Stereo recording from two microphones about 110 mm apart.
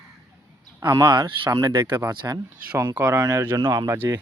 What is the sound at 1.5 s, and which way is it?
Speech, 30° right (ahead or behind).